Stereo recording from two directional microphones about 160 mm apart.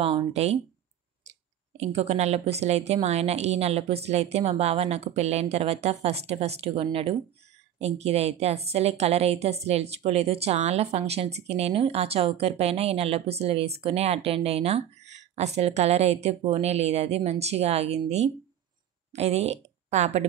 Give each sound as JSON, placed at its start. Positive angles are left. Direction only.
{"t": 0.0, "sound": "a woman's voice", "side_deg": -40}
{"t": 1.8, "sound": "a woman's voice", "side_deg": -40}